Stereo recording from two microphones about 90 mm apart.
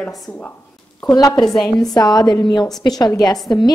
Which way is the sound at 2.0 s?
45° left (ahead or behind).